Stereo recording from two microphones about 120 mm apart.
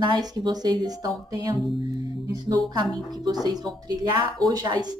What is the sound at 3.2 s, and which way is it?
A woman's voice, 35° right (ahead or behind).